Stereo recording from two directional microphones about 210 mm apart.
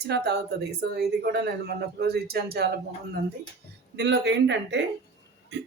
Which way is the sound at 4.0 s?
55° right (ahead or behind).